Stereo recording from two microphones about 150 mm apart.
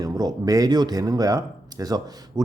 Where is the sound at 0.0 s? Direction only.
25° right (ahead or behind).